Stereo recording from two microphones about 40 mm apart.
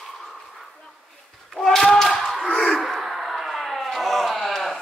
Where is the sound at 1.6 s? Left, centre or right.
Centre.